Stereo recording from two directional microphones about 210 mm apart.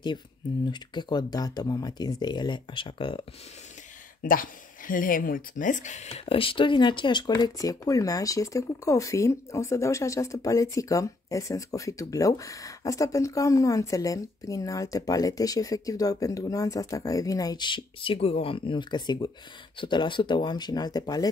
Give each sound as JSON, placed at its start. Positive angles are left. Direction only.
{"t": 0.7, "sound": "speech", "side_deg": 20}
{"t": 4.2, "sound": "speech", "side_deg": 40}